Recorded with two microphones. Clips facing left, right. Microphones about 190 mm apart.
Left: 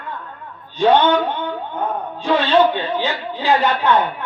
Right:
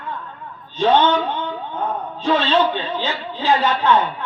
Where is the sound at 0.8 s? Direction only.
15° left (ahead or behind).